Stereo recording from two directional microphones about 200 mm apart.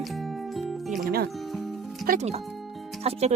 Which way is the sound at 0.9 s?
40° right (ahead or behind).